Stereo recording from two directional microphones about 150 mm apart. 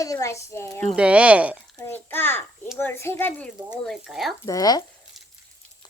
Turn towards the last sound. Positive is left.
turn(degrees=25)  # may be behind; listen again after turning